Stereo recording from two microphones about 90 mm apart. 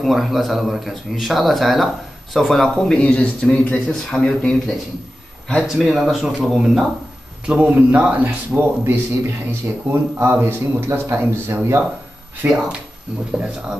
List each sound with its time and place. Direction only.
0.0 s a man's voice: centre (ahead or behind)
5.7 s a man's voice: 5° right (ahead or behind); by 12.6 s 25° right (ahead or behind)